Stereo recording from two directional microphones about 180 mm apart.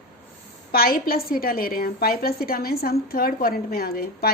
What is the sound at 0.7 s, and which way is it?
A woman's voice, 55° left (ahead or behind).